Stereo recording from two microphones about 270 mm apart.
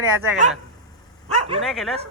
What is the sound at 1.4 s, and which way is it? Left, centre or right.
Bow-wow, right.